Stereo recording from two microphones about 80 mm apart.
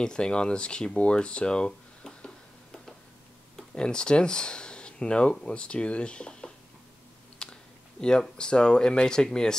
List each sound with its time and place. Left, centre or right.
0.0 s speech: centre
7.4 s a sound: centre
8.0 s speech: centre